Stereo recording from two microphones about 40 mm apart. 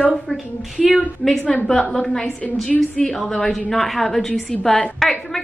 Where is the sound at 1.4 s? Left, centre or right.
Left.